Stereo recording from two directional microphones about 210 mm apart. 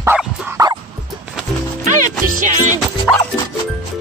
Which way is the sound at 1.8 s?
35° right (ahead or behind).